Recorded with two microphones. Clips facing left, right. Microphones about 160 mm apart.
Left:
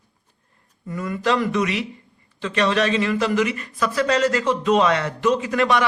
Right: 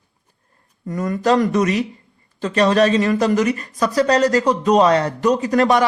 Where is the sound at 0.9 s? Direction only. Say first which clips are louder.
Right 5 dB; 40° right (ahead or behind).